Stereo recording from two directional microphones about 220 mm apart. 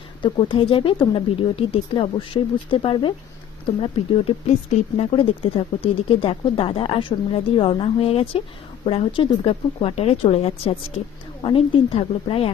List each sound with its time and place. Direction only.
0.2 s speech: 25° left (ahead or behind)